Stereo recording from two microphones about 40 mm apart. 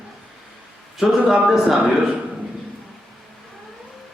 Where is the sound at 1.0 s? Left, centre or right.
Centre.